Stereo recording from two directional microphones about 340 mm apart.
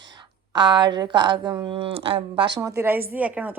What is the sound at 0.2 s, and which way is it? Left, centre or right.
A woman's voice, centre.